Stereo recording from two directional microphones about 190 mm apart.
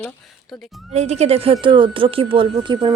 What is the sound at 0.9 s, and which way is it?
Speech, 35° right (ahead or behind).